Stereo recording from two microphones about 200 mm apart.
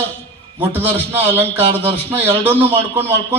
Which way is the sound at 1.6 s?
30° right (ahead or behind).